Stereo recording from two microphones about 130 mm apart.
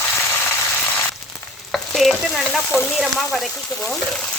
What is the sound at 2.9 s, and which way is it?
Frying, 5° right (ahead or behind).